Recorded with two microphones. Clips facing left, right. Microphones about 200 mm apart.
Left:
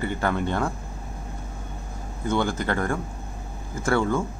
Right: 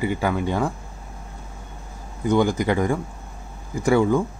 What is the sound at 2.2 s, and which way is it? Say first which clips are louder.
Speech: right 5 dB; 15° right (ahead or behind).